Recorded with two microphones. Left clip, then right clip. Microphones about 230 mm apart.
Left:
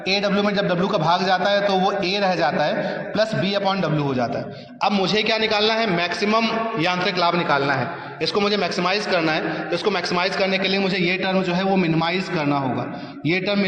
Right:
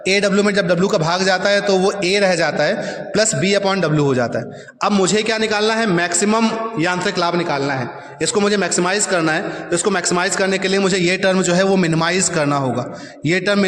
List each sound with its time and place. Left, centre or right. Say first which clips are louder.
0.1 s a man's voice: right 5 dB; right